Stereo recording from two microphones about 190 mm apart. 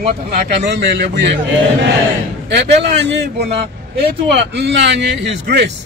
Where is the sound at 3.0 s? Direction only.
60° right (ahead or behind).